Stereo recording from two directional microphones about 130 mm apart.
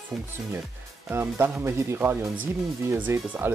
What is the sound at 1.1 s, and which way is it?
Speech, 15° right (ahead or behind).